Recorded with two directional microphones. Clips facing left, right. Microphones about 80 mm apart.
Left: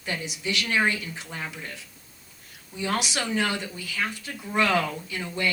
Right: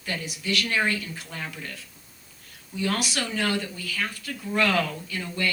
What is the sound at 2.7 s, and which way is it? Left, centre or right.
Speech, left.